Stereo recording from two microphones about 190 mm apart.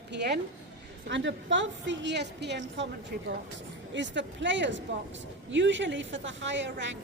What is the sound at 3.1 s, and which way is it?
Speech, 50° right (ahead or behind).